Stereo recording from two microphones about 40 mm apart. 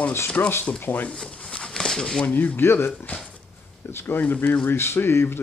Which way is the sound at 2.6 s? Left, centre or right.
Left.